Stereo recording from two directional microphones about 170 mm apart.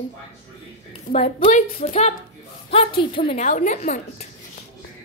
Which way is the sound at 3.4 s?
45° left (ahead or behind).